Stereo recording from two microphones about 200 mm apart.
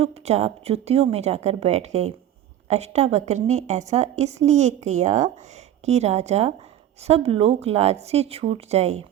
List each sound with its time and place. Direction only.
0.0 s a woman's voice: 30° right (ahead or behind)